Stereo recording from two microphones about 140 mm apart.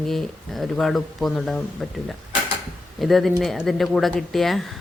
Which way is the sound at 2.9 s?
Centre (ahead or behind).